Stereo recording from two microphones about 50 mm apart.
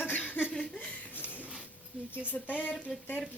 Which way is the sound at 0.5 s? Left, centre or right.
Centre.